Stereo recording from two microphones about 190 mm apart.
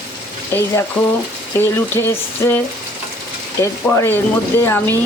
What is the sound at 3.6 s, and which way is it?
Speech, 15° left (ahead or behind).